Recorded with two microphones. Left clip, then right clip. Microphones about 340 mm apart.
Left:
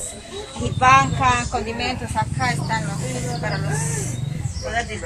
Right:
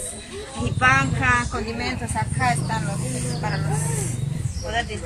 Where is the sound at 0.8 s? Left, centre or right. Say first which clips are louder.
Left 4 dB; centre.